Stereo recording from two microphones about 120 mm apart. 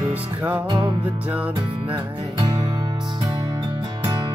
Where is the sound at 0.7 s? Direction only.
40° right (ahead or behind).